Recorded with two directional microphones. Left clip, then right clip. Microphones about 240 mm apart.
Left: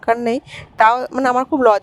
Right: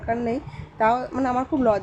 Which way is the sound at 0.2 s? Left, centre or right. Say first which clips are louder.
Left 7 dB; left.